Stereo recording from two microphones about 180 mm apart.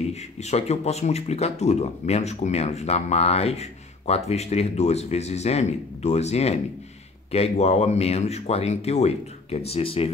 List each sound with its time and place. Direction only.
0.1 s speech: 40° left (ahead or behind)